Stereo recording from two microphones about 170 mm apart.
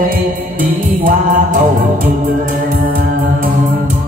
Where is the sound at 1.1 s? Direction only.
50° right (ahead or behind).